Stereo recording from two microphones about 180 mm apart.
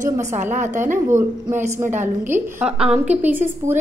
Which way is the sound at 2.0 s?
10° right (ahead or behind).